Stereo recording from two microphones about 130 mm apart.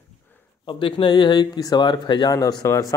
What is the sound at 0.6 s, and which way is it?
Speech, 40° left (ahead or behind).